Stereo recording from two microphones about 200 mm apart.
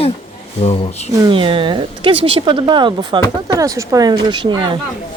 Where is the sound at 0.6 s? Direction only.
35° left (ahead or behind).